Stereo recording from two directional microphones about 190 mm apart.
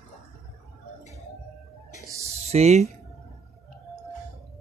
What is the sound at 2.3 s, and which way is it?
Speech, 35° right (ahead or behind).